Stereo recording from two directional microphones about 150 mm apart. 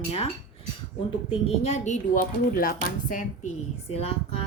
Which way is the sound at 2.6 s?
65° left (ahead or behind).